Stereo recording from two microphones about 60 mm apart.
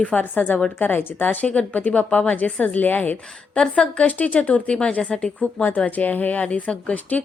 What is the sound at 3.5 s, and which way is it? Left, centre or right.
A woman's voice, centre.